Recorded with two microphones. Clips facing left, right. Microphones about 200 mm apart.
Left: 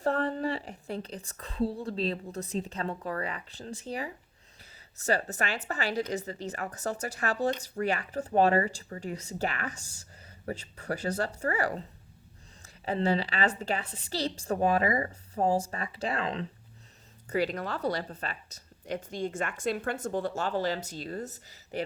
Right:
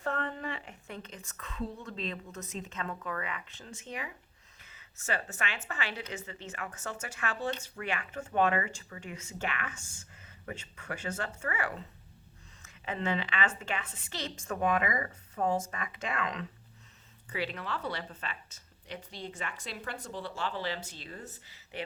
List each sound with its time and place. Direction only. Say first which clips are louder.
0.0 s speech: left 7 dB; 35° left (ahead or behind)
17.2 s speech: left 7 dB; 40° left (ahead or behind)